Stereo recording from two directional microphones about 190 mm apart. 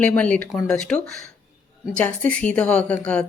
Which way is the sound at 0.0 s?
5° left (ahead or behind).